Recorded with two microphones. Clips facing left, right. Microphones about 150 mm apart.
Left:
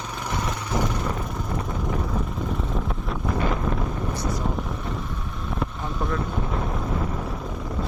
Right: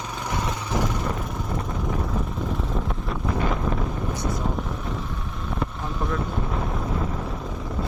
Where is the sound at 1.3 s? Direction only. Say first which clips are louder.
Even; centre (ahead or behind).